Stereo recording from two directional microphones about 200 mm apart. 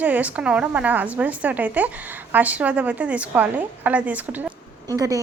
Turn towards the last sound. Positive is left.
turn(degrees=-15)  # may be behind; listen again after turning